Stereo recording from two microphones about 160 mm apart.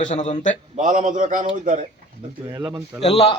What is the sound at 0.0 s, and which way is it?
Speech, 50° left (ahead or behind).